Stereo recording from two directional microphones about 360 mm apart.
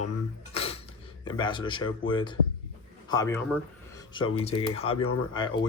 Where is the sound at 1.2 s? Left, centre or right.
Centre.